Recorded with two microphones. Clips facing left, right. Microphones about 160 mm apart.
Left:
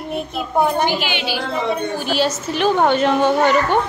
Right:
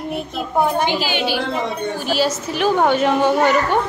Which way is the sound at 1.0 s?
45° right (ahead or behind).